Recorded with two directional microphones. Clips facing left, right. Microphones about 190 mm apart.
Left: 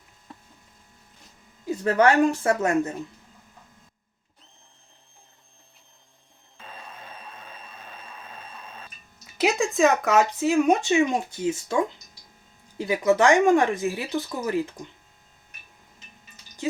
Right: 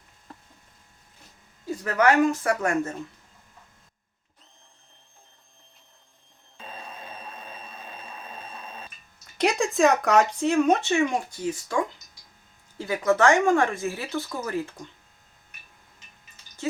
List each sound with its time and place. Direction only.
1.8 s speech: 30° left (ahead or behind)
6.7 s a sound: 25° right (ahead or behind)
9.2 s speech: 5° left (ahead or behind)